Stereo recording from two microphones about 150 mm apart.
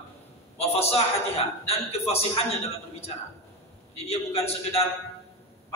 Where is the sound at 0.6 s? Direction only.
45° left (ahead or behind).